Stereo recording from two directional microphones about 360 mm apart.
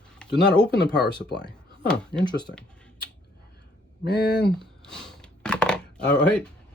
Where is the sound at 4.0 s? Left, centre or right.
Left.